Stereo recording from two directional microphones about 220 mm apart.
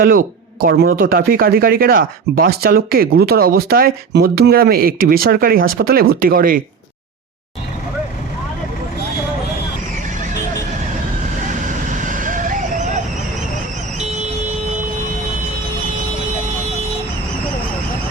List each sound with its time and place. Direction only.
0.0 s speech: 40° right (ahead or behind)
11.9 s vehicle: 35° right (ahead or behind)